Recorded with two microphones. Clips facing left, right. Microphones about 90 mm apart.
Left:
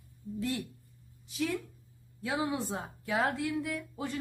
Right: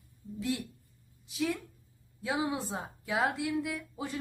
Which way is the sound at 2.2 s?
20° right (ahead or behind).